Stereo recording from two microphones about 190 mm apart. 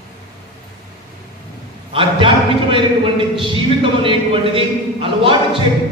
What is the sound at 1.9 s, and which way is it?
A man's voice, 25° right (ahead or behind).